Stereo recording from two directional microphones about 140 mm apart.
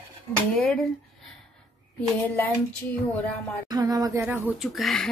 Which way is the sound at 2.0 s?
10° left (ahead or behind).